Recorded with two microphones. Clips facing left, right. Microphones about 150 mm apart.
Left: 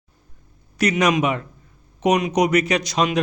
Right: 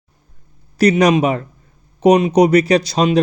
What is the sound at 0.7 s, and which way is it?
Speech, 35° right (ahead or behind).